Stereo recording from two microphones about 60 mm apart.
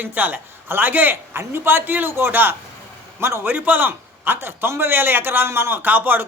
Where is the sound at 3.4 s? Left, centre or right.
Right.